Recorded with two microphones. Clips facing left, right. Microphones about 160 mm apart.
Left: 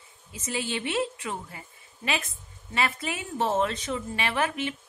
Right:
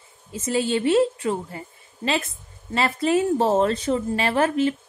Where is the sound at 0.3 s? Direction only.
35° right (ahead or behind).